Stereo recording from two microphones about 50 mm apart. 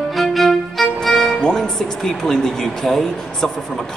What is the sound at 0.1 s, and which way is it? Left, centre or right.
Violin, centre.